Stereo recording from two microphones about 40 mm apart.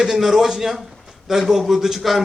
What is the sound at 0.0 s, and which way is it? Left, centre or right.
A man's voice, centre.